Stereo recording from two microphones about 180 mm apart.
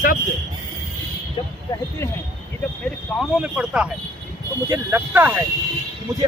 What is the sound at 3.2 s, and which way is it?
Speech, 5° right (ahead or behind).